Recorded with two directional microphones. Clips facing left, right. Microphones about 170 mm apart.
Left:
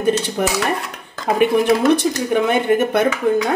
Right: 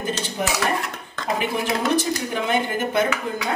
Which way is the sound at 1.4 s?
60° left (ahead or behind).